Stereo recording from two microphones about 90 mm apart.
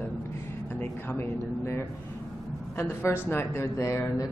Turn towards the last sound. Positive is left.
turn(degrees=35)  # may be behind; listen again after turning